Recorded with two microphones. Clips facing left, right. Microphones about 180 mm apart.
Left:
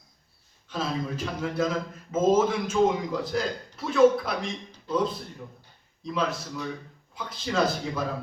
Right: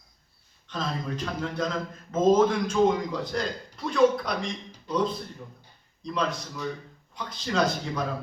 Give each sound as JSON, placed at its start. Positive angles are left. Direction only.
{"t": 0.7, "sound": "a man's voice", "side_deg": 5}